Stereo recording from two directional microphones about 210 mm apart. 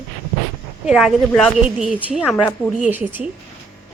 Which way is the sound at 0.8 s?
Centre (ahead or behind).